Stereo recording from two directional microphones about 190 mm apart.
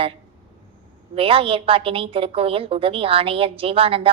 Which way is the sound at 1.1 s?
30° right (ahead or behind).